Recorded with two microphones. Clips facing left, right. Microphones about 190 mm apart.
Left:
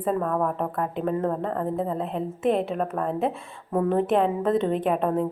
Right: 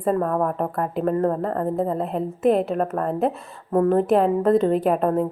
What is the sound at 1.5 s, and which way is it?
Speech, 40° right (ahead or behind).